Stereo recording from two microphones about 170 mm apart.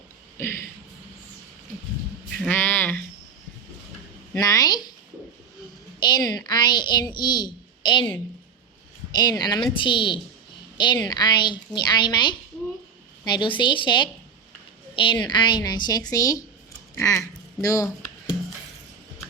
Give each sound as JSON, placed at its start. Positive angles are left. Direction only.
{"t": 0.3, "sound": "speech", "side_deg": 15}
{"t": 2.5, "sound": "a sound", "side_deg": 10}
{"t": 4.4, "sound": "a woman's voice", "side_deg": 20}
{"t": 6.0, "sound": "a sound", "side_deg": 25}
{"t": 6.3, "sound": "a woman's voice", "side_deg": 25}
{"t": 9.1, "sound": "a woman's voice", "side_deg": 25}